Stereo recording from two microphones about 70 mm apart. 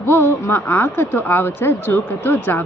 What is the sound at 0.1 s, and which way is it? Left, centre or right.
Speech, left.